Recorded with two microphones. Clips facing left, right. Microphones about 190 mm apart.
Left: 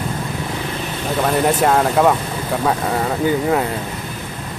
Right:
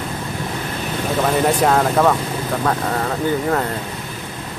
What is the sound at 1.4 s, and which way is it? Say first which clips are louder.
Speech: left 1 dB; 5° left (ahead or behind).